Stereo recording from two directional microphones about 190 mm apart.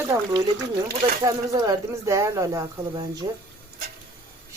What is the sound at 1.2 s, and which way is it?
Speech, 20° right (ahead or behind).